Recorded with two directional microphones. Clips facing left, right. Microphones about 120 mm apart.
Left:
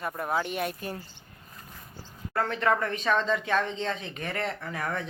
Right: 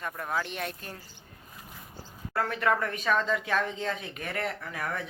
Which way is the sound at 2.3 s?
5° right (ahead or behind).